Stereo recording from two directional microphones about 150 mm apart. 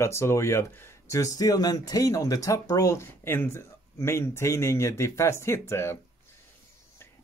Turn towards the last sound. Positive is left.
turn(degrees=15)  # may be behind; listen again after turning